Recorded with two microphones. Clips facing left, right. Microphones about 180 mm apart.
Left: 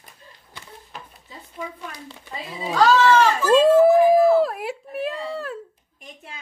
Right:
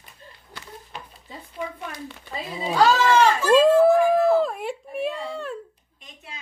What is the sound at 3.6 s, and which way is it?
A woman's voice, 10° left (ahead or behind).